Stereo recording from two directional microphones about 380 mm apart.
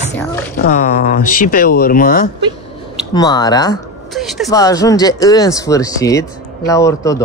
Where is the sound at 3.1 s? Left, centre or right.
Centre.